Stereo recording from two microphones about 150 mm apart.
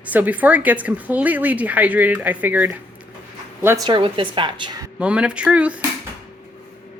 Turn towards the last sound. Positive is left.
turn(degrees=-10)  # may be behind; listen again after turning